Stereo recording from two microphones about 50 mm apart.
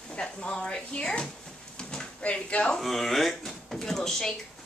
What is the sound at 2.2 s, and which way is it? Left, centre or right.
Speech, left.